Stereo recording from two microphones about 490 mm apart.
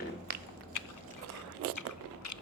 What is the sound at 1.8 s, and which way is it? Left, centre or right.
Biting, left.